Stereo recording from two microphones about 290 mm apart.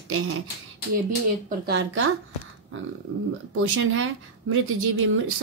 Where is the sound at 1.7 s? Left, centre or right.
Right.